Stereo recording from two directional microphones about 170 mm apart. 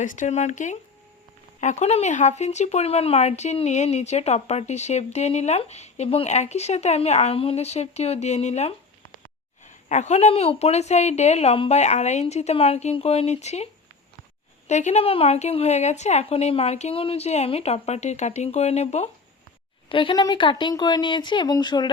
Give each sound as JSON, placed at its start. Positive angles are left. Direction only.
{"t": 0.0, "sound": "speech", "side_deg": 50}
{"t": 14.7, "sound": "speech", "side_deg": 45}
{"t": 19.9, "sound": "speech", "side_deg": 30}